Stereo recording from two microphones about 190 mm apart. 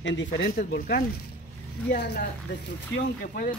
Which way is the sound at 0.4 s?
50° left (ahead or behind).